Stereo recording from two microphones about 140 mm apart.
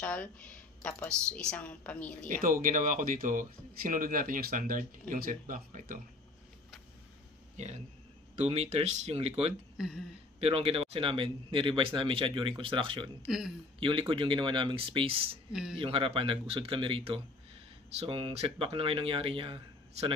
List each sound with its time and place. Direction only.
0.0 s a woman's voice: 10° left (ahead or behind)
2.2 s speech: 75° right (ahead or behind)
7.5 s speech: 55° right (ahead or behind)
9.8 s hiccup: 5° right (ahead or behind)
10.4 s speech: 40° right (ahead or behind)
15.5 s speech: 5° right (ahead or behind)
15.8 s speech: 40° right (ahead or behind)